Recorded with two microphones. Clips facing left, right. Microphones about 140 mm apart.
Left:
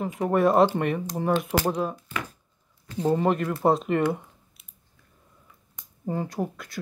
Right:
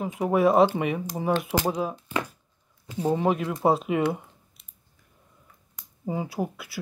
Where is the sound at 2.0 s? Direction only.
25° right (ahead or behind).